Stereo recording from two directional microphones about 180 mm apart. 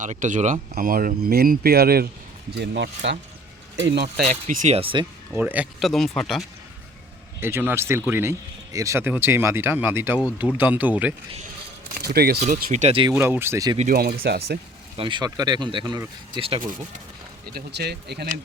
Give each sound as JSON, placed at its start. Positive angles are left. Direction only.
{"t": 0.0, "sound": "speech", "side_deg": -45}
{"t": 0.7, "sound": "speech", "side_deg": -55}
{"t": 2.6, "sound": "speech", "side_deg": -75}
{"t": 4.2, "sound": "speech", "side_deg": -45}
{"t": 5.3, "sound": "speech", "side_deg": -10}
{"t": 7.3, "sound": "speech", "side_deg": -10}
{"t": 11.9, "sound": "speech", "side_deg": -60}
{"t": 12.5, "sound": "speech", "side_deg": -45}
{"t": 13.1, "sound": "speech", "side_deg": -10}
{"t": 13.7, "sound": "speech", "side_deg": -55}
{"t": 14.9, "sound": "speech", "side_deg": -25}
{"t": 17.5, "sound": "speech", "side_deg": -65}